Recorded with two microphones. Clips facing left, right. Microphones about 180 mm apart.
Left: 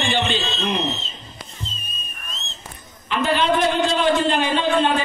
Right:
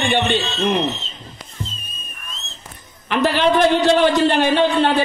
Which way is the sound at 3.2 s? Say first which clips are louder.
Right 4 dB; 75° right (ahead or behind).